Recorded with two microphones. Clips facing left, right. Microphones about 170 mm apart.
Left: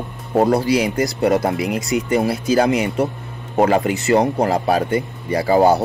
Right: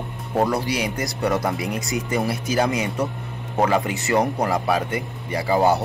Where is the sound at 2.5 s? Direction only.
30° left (ahead or behind).